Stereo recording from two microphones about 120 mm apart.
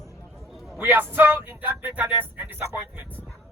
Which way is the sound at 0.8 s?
15° right (ahead or behind).